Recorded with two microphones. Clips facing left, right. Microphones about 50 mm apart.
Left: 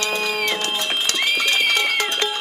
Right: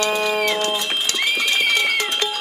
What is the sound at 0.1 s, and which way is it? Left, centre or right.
Music, centre.